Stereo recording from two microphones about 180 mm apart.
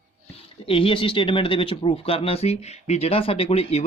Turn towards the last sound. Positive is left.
turn(degrees=35)  # may be behind; listen again after turning